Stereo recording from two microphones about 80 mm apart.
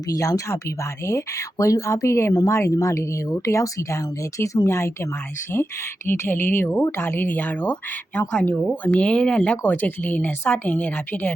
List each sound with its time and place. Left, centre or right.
0.1 s speech: left